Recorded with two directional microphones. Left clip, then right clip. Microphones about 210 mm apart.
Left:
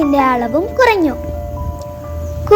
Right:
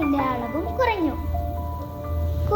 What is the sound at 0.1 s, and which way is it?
A woman's voice, 40° left (ahead or behind).